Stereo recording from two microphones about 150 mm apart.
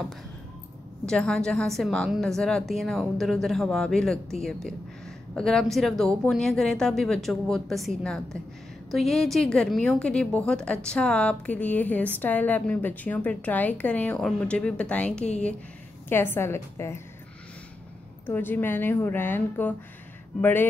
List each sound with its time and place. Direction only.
1.0 s a woman's voice: 5° left (ahead or behind)
18.2 s a woman's voice: 15° left (ahead or behind)